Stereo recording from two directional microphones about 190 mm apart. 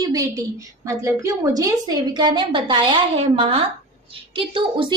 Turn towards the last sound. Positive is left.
turn(degrees=-25)  # may be behind; listen again after turning